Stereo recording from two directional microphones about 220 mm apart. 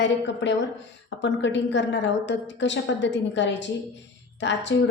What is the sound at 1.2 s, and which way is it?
A woman's voice, 55° left (ahead or behind).